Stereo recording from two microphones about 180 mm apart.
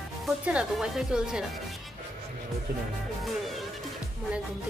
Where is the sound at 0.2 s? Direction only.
5° right (ahead or behind).